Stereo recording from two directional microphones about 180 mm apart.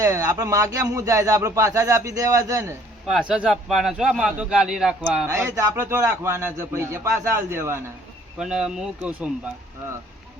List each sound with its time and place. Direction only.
0.0 s a man's voice: 15° right (ahead or behind)
3.1 s a man's voice: 5° right (ahead or behind)
8.4 s speech: 5° right (ahead or behind)